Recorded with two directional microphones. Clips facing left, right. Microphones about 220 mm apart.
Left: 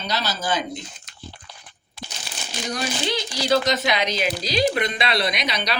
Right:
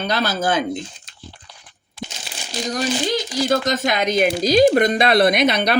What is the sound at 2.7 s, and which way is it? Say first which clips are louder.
Speech: right 5 dB; 45° right (ahead or behind).